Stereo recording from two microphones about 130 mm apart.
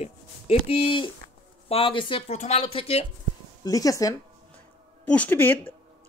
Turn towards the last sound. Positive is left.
turn(degrees=15)  # may be behind; listen again after turning